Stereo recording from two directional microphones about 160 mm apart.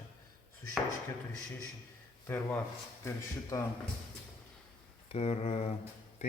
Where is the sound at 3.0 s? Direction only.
20° left (ahead or behind).